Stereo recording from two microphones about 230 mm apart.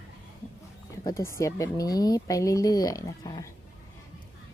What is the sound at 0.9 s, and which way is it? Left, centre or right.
Speech, centre.